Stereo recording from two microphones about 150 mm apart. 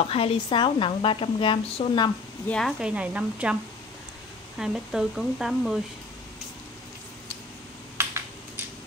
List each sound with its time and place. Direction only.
0.1 s a woman's voice: 40° left (ahead or behind)
2.4 s speech: 5° left (ahead or behind)
2.8 s speech: 10° right (ahead or behind)
4.6 s speech: 5° right (ahead or behind)